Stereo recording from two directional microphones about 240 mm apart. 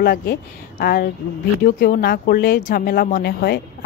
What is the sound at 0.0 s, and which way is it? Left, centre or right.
Speech, left.